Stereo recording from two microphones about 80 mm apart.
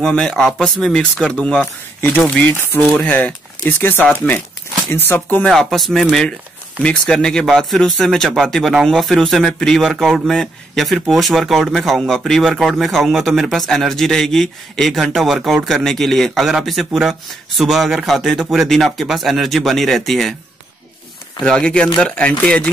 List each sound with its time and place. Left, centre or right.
0.0 s speech: centre
2.0 s speech: left
5.5 s speech: centre
6.8 s speech: centre
21.5 s speech: centre